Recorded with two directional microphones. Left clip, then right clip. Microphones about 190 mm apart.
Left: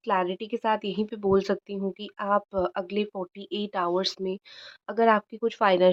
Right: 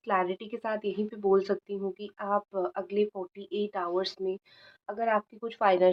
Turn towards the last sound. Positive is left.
turn(degrees=40)  # may be behind; listen again after turning